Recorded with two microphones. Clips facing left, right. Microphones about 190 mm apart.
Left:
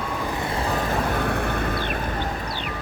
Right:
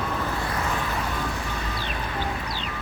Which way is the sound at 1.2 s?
60° left (ahead or behind).